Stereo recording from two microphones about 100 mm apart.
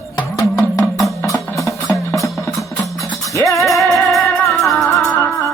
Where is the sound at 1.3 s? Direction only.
30° left (ahead or behind).